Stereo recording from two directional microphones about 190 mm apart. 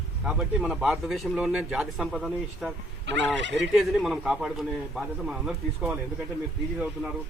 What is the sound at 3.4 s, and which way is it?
Fowl, 70° right (ahead or behind).